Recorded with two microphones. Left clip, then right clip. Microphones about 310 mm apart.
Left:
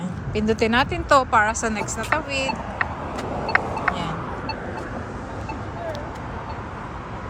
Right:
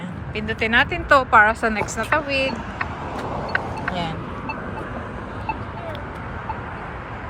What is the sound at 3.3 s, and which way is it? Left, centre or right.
Vehicle, left.